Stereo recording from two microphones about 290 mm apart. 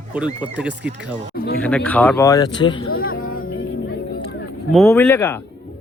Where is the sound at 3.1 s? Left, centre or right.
Left.